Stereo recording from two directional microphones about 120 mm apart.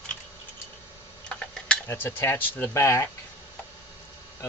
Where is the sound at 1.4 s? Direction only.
5° left (ahead or behind).